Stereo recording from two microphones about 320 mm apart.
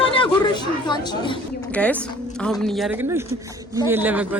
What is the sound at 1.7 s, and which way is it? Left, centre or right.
Speech, centre.